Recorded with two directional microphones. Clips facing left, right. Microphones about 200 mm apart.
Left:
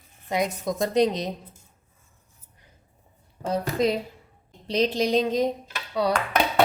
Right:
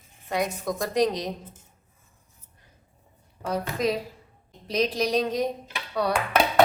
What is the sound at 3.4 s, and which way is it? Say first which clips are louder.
A woman's voice: left 3 dB; 25° left (ahead or behind).